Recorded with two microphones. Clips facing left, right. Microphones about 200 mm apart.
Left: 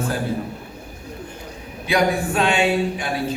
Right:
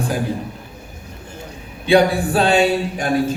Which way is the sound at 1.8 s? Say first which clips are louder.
Right 5 dB; 30° right (ahead or behind).